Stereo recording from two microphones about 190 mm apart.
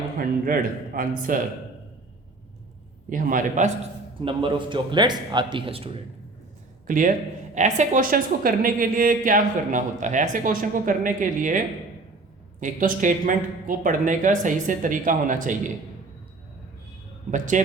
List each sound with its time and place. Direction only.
0.2 s a woman's voice: 45° right (ahead or behind)
3.1 s a woman's voice: 45° right (ahead or behind)
4.2 s a man's voice: 25° right (ahead or behind)
6.8 s a woman's voice: 45° right (ahead or behind)
17.3 s a man's voice: 40° right (ahead or behind)